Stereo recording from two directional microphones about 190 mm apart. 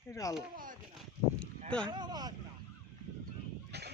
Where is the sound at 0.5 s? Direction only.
45° right (ahead or behind).